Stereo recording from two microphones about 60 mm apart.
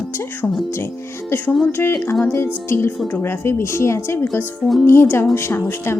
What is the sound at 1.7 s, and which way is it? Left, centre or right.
Speech, left.